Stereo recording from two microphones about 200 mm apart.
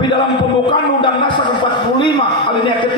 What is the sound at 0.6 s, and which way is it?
A man's voice, 25° left (ahead or behind).